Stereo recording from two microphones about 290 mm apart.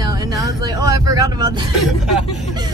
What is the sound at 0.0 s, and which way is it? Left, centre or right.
Vehicle, centre.